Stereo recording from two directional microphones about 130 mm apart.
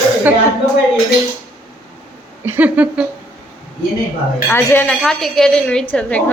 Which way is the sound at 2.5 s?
10° right (ahead or behind).